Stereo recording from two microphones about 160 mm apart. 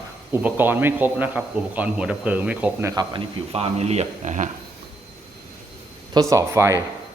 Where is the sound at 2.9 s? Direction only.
25° right (ahead or behind).